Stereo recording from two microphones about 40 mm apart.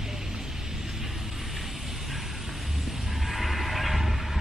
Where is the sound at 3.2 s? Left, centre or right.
Centre.